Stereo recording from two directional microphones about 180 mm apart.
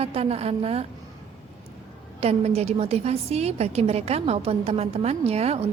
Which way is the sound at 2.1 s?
35° right (ahead or behind).